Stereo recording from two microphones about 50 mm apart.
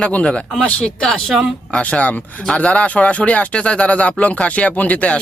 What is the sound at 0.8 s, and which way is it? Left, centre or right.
Speech, centre.